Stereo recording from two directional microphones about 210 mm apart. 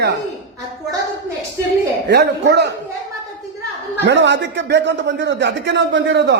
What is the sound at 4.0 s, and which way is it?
Speech, 55° right (ahead or behind).